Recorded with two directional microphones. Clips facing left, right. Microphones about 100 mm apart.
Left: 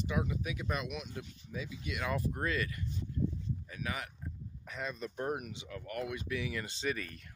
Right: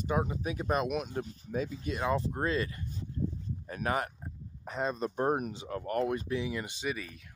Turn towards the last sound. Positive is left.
turn(degrees=-5)  # may be behind; listen again after turning